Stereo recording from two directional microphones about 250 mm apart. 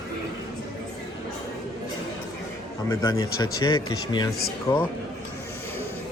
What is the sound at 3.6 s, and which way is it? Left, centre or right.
Speech, centre.